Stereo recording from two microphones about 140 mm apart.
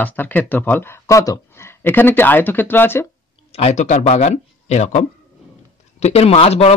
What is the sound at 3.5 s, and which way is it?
Speech, 50° left (ahead or behind).